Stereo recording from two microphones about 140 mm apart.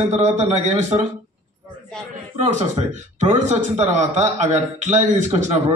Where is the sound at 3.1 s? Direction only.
60° right (ahead or behind).